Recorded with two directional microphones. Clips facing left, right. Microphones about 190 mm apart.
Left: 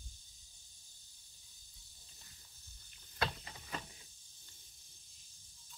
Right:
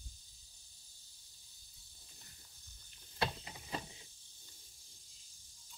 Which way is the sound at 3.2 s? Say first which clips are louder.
Right 1 dB; 20° right (ahead or behind).